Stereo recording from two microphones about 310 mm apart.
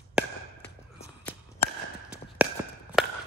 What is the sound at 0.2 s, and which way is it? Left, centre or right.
Chop, centre.